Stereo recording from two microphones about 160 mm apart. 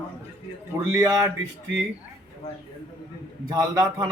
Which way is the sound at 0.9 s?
20° right (ahead or behind).